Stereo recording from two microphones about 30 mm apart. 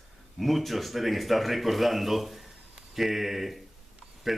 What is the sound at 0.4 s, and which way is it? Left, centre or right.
Speech, centre.